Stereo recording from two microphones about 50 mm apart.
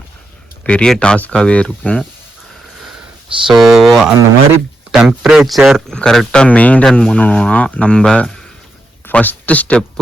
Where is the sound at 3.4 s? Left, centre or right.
Centre.